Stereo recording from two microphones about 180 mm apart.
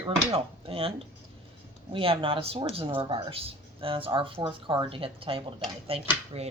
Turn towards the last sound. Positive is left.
turn(degrees=-35)  # may be behind; listen again after turning